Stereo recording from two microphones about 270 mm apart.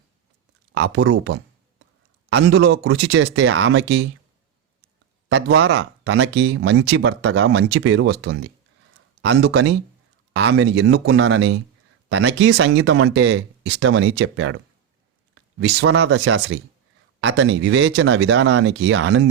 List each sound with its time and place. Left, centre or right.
0.7 s speech: right
5.5 s speech: right